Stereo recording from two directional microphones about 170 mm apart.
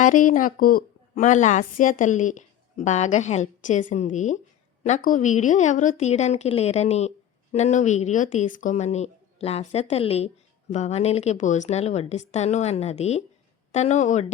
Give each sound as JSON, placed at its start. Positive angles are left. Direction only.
{"t": 0.0, "sound": "a woman's voice", "side_deg": 50}